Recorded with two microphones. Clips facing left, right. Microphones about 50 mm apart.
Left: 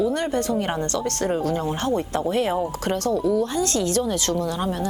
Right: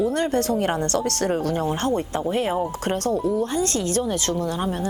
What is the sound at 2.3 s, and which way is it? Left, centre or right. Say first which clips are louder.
Speech: left 1 dB; centre.